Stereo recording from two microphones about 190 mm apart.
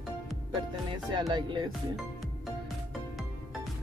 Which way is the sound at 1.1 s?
25° right (ahead or behind).